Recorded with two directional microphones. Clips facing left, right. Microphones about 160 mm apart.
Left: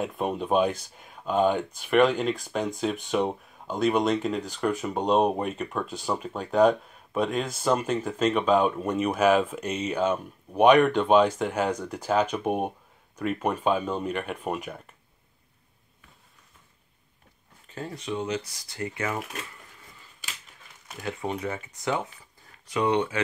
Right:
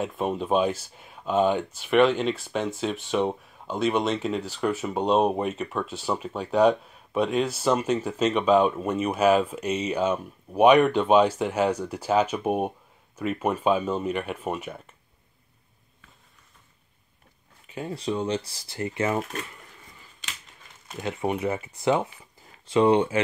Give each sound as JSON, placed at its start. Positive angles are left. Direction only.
{"t": 0.0, "sound": "speech", "side_deg": 0}
{"t": 17.6, "sound": "a sound", "side_deg": -15}
{"t": 17.9, "sound": "speech", "side_deg": -35}
{"t": 21.0, "sound": "speech", "side_deg": -20}